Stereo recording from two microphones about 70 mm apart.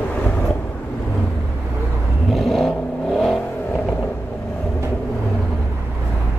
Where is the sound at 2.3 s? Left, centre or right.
Centre.